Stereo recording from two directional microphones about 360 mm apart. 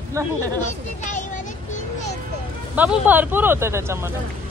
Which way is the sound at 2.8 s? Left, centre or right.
Centre.